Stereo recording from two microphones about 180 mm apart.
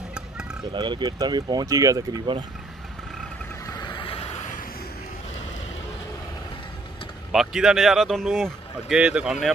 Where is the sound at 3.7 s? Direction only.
25° left (ahead or behind).